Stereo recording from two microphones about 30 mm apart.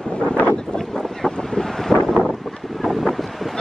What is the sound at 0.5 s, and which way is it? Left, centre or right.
Wind noise, left.